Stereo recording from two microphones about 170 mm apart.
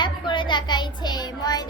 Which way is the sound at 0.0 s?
30° left (ahead or behind).